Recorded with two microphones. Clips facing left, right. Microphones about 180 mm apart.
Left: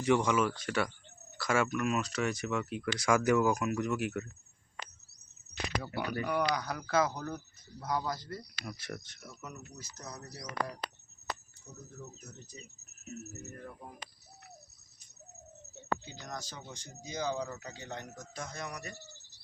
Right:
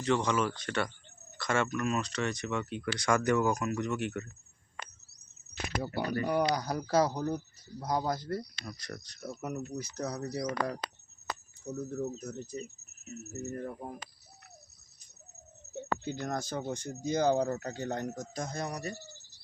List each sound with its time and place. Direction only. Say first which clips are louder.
0.0 s speech: left 1 dB; 10° left (ahead or behind)
5.8 s speech: right 6 dB; 30° right (ahead or behind); by 8.4 s 50° right (ahead or behind)
8.6 s speech: left 1 dB; 5° left (ahead or behind)
9.4 s speech: right 11 dB; 60° right (ahead or behind)
12.3 s speech: right 12 dB; 50° right (ahead or behind)
16.0 s speech: right 9 dB; 55° right (ahead or behind); by 18.9 s 35° right (ahead or behind)